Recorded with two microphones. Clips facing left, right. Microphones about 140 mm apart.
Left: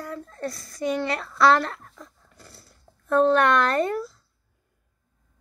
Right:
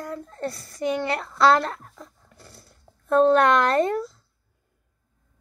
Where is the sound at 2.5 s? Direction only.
20° right (ahead or behind).